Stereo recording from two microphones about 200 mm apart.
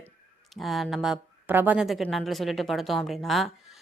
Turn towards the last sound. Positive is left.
turn(degrees=0)  # may be behind; listen again after turning